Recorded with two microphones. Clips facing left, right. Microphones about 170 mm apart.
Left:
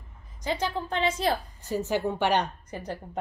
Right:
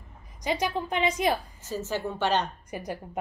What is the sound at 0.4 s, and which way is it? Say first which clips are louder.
A woman's voice: right 1 dB; 15° right (ahead or behind).